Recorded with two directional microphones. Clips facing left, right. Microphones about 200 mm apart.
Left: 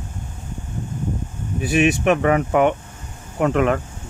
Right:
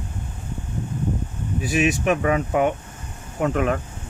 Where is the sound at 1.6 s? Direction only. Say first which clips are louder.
Left 4 dB; 60° left (ahead or behind).